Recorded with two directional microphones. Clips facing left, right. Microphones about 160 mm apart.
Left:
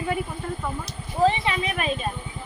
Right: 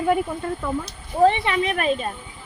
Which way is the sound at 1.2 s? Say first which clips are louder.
Right 4 dB; 60° right (ahead or behind).